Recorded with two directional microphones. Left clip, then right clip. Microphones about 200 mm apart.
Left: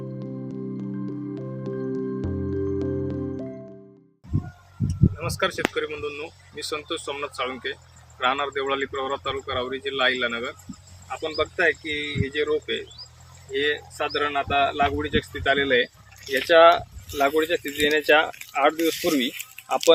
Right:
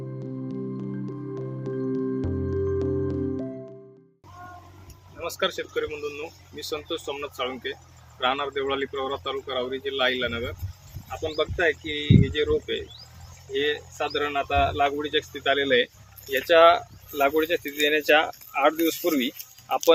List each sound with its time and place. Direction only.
0.4 s music: centre (ahead or behind)
5.1 s speech: 10° left (ahead or behind); by 19.9 s 30° left (ahead or behind)